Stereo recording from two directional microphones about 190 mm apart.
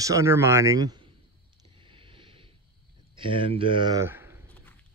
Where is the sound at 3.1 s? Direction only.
25° right (ahead or behind).